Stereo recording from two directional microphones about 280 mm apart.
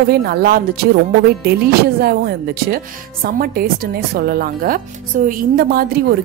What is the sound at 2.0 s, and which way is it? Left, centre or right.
A woman's voice, right.